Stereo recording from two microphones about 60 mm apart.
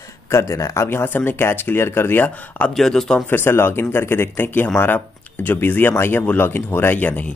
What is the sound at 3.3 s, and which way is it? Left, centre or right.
Speech, left.